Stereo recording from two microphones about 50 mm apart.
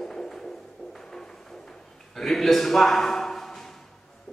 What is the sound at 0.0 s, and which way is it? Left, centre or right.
Music, centre.